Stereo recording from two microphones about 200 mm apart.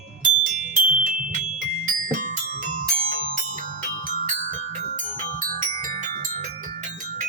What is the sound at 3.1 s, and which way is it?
Marimba, 45° right (ahead or behind).